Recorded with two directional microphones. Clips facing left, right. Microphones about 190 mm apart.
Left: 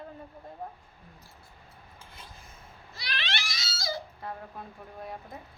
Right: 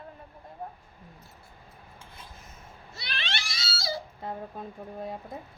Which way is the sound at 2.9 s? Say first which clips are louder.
Left 1 dB; 25° right (ahead or behind).